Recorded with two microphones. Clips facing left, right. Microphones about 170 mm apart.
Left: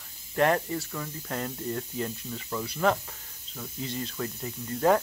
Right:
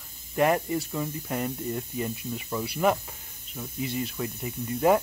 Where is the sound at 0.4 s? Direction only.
10° right (ahead or behind).